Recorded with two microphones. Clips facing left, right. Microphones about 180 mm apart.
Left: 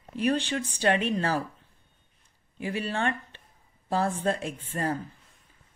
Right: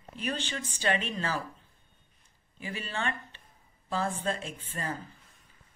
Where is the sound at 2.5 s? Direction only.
60° left (ahead or behind).